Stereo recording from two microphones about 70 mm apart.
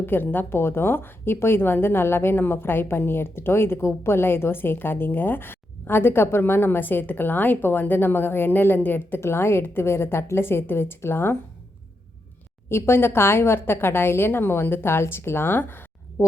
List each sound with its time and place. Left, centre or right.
0.0 s a woman's voice: left
12.6 s a woman's voice: left